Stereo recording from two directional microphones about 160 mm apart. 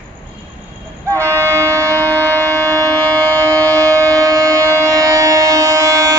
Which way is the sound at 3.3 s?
20° right (ahead or behind).